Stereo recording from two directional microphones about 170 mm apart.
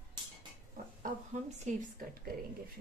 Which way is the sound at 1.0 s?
45° right (ahead or behind).